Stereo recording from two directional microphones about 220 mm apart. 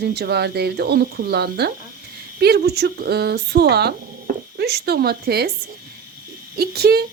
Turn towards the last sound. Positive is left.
turn(degrees=-45)  # may be behind; listen again after turning